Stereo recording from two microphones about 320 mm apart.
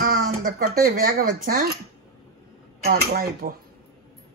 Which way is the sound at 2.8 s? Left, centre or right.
Right.